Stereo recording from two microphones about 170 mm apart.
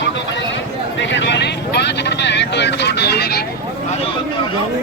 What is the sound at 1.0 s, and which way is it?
Vehicle, 90° left.